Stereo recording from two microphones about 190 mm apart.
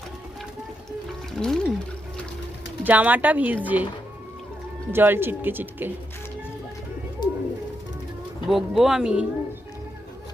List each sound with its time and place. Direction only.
1.3 s music: centre (ahead or behind)
2.8 s speech: 10° right (ahead or behind)
4.9 s speech: 10° right (ahead or behind)
7.2 s bird: 20° left (ahead or behind)
8.4 s speech: centre (ahead or behind)